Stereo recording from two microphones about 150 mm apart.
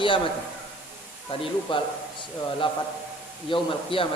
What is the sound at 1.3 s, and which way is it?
A man's voice, 40° left (ahead or behind).